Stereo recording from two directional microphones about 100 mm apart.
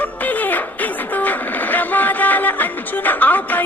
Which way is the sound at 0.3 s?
15° left (ahead or behind).